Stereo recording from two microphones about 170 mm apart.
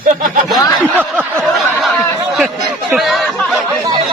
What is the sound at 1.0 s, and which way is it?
Snicker, 10° right (ahead or behind).